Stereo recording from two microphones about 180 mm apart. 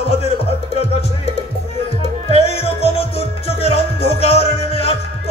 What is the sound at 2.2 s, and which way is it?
Music, 35° left (ahead or behind).